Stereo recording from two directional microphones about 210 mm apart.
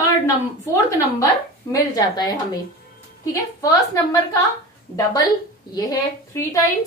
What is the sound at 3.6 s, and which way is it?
Speech, 15° left (ahead or behind).